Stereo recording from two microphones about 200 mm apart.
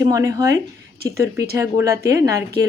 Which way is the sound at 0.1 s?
15° right (ahead or behind).